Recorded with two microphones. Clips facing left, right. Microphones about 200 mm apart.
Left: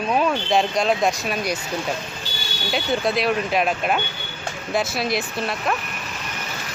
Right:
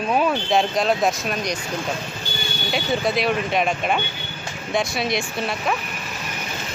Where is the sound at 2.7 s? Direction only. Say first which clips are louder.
Even; centre (ahead or behind).